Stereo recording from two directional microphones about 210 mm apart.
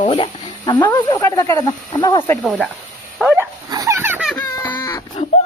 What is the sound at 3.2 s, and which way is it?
Dog, 10° right (ahead or behind).